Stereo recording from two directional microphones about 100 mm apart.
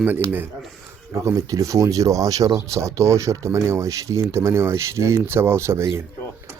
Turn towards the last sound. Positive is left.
turn(degrees=-25)  # may be behind; listen again after turning